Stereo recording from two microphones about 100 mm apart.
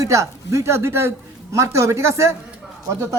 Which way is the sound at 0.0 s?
30° right (ahead or behind).